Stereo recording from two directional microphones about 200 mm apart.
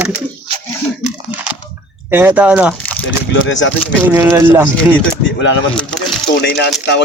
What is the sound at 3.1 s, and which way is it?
Speech, 70° left (ahead or behind).